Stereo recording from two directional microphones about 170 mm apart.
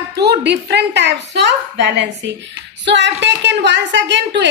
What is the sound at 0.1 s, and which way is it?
A woman's voice, 75° right (ahead or behind).